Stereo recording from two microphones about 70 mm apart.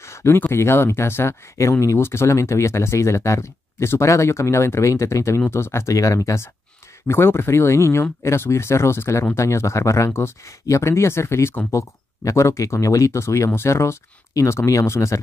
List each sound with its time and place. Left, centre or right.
0.0 s a sound: left
0.5 s speech: left
7.1 s speech: left